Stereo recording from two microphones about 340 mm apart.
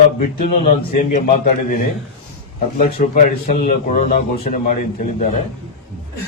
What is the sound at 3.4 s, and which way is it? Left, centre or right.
A man's voice, left.